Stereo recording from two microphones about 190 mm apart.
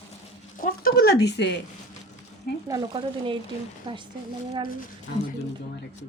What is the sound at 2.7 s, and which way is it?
Speech, 25° right (ahead or behind).